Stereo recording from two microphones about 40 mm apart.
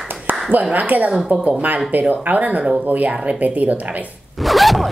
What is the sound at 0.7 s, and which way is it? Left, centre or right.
Speech, right.